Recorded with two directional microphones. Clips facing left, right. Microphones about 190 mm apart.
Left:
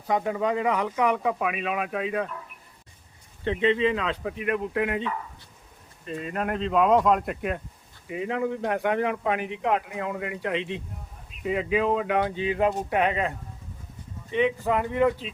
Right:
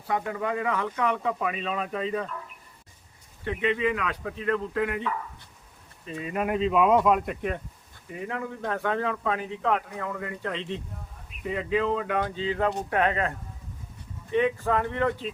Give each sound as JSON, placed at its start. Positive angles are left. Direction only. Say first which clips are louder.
{"t": 0.1, "sound": "speech", "louder": "left 3 dB", "side_deg": 20}
{"t": 3.4, "sound": "speech", "louder": "left 3 dB", "side_deg": 25}
{"t": 6.1, "sound": "speech", "louder": "right 1 dB", "side_deg": -5}
{"t": 8.0, "sound": "speech", "louder": "left 6 dB", "side_deg": 15}
{"t": 14.6, "sound": "speech", "louder": "left 3 dB", "side_deg": 15}